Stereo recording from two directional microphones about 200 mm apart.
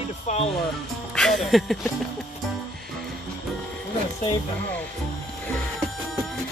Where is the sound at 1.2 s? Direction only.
Centre (ahead or behind).